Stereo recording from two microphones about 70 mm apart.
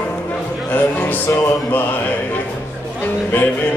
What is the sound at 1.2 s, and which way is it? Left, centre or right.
Music, left.